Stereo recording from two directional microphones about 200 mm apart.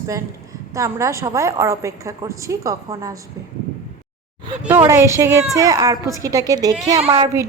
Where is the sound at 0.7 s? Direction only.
15° right (ahead or behind).